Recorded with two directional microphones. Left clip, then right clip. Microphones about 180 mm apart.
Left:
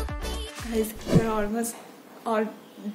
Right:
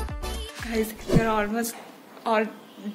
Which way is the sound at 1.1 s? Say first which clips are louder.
Right 3 dB; 5° left (ahead or behind).